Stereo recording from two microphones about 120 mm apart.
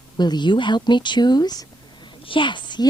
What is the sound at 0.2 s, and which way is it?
Speech, 35° left (ahead or behind).